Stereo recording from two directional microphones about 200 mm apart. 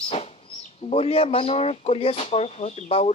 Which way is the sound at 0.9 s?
30° left (ahead or behind).